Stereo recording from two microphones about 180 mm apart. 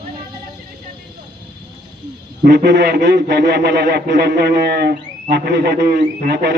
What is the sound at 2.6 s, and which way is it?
A man's voice, 75° right (ahead or behind).